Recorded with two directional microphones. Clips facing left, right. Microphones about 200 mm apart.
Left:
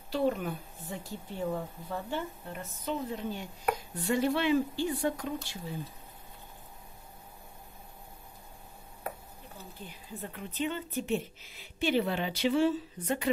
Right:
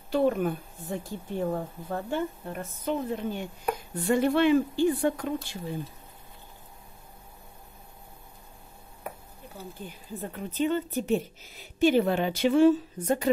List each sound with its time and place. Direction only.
0.1 s a woman's voice: 50° right (ahead or behind)
9.8 s a woman's voice: 40° right (ahead or behind)